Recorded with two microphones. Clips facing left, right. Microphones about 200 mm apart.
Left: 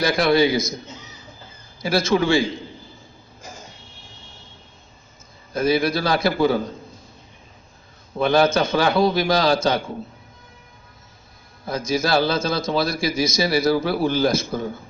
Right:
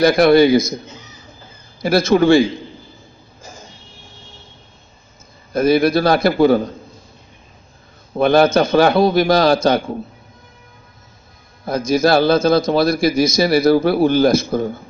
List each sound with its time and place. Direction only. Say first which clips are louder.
0.0 s a man's voice: right 7 dB; 55° right (ahead or behind)
1.8 s a man's voice: right 6 dB; 55° right (ahead or behind)
5.5 s a man's voice: right 6 dB; 55° right (ahead or behind)
8.2 s a man's voice: right 5 dB; 55° right (ahead or behind)
11.6 s a man's voice: right 7 dB; 60° right (ahead or behind)